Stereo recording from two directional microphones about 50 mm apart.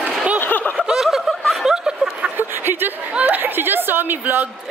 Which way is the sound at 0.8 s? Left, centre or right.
Centre.